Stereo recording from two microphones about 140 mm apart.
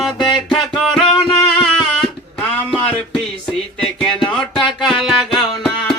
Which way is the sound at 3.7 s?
5° left (ahead or behind).